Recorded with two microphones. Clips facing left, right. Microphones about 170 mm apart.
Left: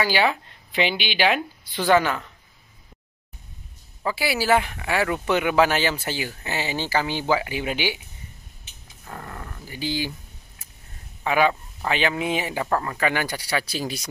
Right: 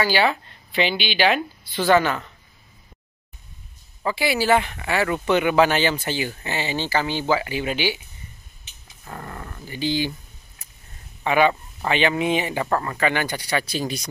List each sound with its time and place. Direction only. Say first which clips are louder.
0.0 s speech: right 1 dB; 10° left (ahead or behind)
4.0 s speech: right 2 dB; 5° left (ahead or behind)
9.0 s dog: right 2 dB; centre (ahead or behind)
11.2 s speech: right 2 dB; centre (ahead or behind)